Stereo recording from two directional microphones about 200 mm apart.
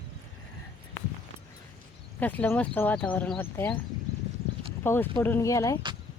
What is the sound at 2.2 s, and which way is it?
Speech, 10° left (ahead or behind).